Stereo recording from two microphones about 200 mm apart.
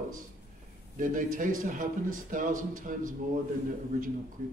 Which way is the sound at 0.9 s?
40° right (ahead or behind).